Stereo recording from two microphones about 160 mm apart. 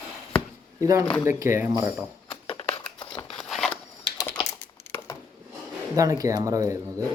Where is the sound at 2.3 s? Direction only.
35° left (ahead or behind).